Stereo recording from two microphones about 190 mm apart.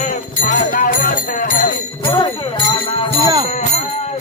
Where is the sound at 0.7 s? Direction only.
45° left (ahead or behind).